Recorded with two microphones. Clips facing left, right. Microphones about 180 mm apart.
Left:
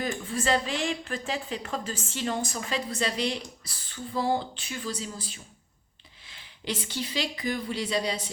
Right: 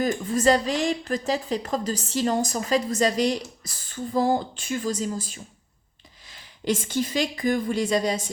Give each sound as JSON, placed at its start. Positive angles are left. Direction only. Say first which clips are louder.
{"t": 0.0, "sound": "a woman's voice", "louder": "right 8 dB", "side_deg": -40}